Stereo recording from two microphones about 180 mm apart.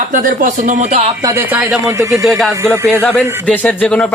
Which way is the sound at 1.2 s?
15° right (ahead or behind).